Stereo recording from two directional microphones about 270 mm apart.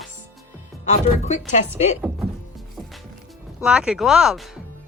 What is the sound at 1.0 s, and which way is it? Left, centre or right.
Speech, left.